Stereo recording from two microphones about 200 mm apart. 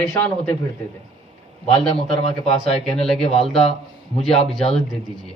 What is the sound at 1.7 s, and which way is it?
Speech, 30° left (ahead or behind).